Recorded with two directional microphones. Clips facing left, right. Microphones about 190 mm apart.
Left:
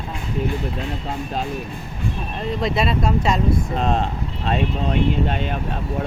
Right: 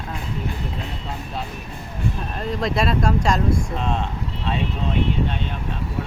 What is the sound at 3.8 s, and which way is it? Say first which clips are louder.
Speech: left 7 dB; 40° left (ahead or behind).